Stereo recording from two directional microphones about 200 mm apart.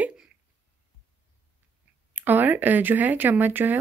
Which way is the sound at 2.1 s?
10° right (ahead or behind).